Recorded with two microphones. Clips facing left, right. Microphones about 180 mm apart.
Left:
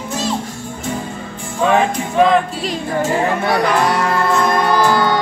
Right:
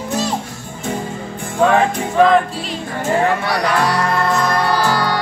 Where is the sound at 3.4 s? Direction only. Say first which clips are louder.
Left 2 dB; 50° left (ahead or behind).